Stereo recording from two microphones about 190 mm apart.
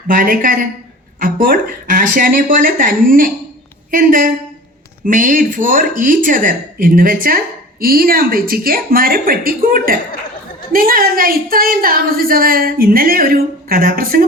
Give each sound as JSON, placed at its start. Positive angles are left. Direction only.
{"t": 0.1, "sound": "a woman's voice", "side_deg": -45}